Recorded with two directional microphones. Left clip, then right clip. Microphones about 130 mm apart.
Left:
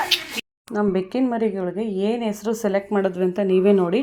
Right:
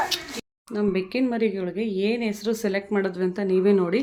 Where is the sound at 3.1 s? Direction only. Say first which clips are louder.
Left 4 dB; 15° left (ahead or behind).